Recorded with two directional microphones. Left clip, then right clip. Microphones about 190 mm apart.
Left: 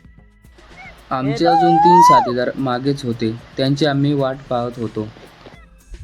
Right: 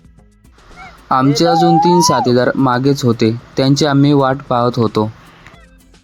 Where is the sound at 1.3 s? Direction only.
40° right (ahead or behind).